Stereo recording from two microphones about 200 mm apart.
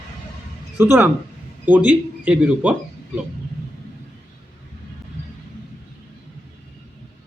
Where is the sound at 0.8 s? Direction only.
10° right (ahead or behind).